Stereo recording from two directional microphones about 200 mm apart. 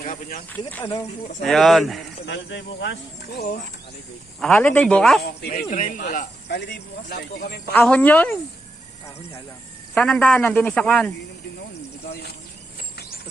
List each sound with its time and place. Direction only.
0.0 s speech: 40° left (ahead or behind)
1.5 s speech: centre (ahead or behind)
2.2 s speech: 60° left (ahead or behind)
4.4 s speech: 5° left (ahead or behind)
5.2 s speech: 55° left (ahead or behind)
5.5 s speech: 40° left (ahead or behind)
6.5 s speech: 55° left (ahead or behind)
7.7 s speech: 10° left (ahead or behind)
9.9 s speech: 5° left (ahead or behind)